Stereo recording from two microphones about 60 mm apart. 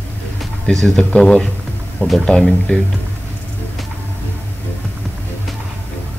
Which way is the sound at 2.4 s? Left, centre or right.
Centre.